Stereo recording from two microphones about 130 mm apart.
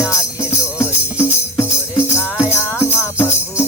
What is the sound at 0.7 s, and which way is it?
Music, 20° left (ahead or behind).